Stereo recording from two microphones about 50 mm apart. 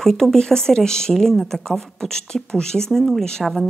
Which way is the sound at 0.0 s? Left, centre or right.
Centre.